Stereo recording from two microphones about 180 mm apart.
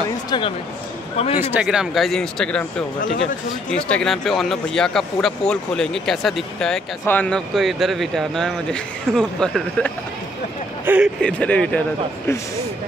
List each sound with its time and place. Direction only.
1.1 s speech: 35° left (ahead or behind)
1.5 s speech: 5° right (ahead or behind)
3.7 s speech: 5° left (ahead or behind)
11.1 s speech: 5° left (ahead or behind)